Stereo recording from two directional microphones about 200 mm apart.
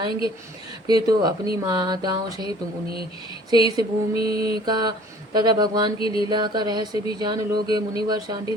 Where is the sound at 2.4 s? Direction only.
25° left (ahead or behind).